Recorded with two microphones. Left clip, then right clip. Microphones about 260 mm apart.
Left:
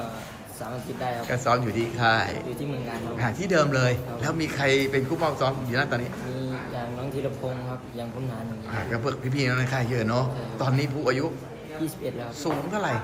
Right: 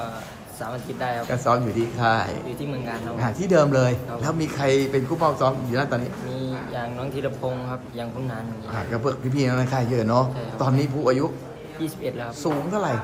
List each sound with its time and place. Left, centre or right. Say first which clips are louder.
0.9 s speech: right 3 dB; centre
1.3 s a man's voice: right 2 dB; centre
6.4 s speech: right 4 dB; centre
8.9 s a man's voice: right 4 dB; centre
12.4 s a man's voice: right 3 dB; centre